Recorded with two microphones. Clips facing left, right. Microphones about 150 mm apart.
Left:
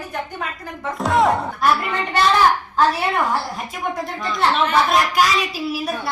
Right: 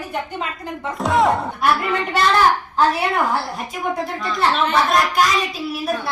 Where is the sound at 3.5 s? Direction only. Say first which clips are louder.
Right 2 dB; centre (ahead or behind).